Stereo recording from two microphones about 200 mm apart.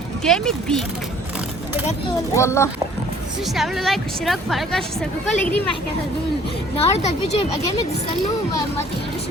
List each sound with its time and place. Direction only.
0.3 s a woman's voice: centre (ahead or behind)
2.3 s a child's voice: 15° left (ahead or behind)
3.5 s a woman's voice: centre (ahead or behind)
6.7 s speech: 30° left (ahead or behind)